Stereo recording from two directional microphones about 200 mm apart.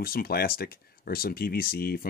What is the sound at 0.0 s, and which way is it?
Speech, 50° left (ahead or behind).